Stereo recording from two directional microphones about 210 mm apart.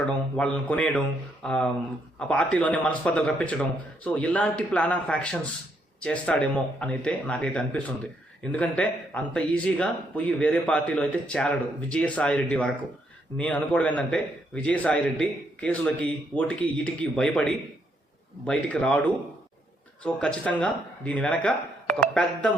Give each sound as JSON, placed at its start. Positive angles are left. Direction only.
{"t": 0.3, "sound": "speech", "side_deg": 5}